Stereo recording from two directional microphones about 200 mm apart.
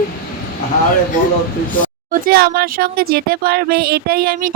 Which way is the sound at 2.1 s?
50° right (ahead or behind).